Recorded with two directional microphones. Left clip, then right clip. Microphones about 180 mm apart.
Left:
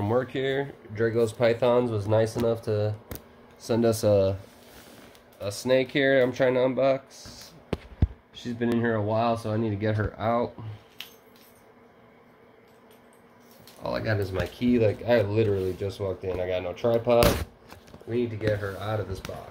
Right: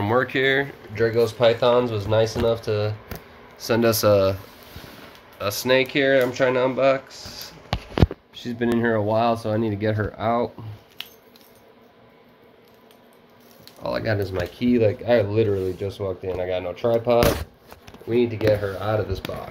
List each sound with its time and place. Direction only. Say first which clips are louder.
0.0 s speech: right 6 dB; 10° left (ahead or behind)
5.4 s speech: right 4 dB; 5° left (ahead or behind)
8.4 s speech: right 4 dB; 10° right (ahead or behind)
9.8 s speech: right 4 dB; centre (ahead or behind)
11.0 s a sound: right 5 dB; 30° right (ahead or behind)
13.8 s speech: right 4 dB; 5° right (ahead or behind)
19.2 s speech: right 6 dB; 30° right (ahead or behind)